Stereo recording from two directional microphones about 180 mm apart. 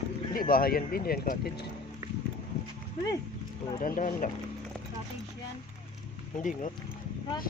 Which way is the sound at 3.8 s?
50° left (ahead or behind).